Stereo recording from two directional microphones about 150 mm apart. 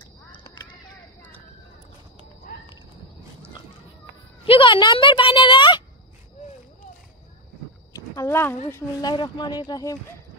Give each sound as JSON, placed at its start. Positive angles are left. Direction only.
{"t": 0.3, "sound": "a sound", "side_deg": 35}
{"t": 4.5, "sound": "a woman's voice", "side_deg": 35}
{"t": 8.2, "sound": "speech", "side_deg": 15}
{"t": 9.1, "sound": "speech", "side_deg": 30}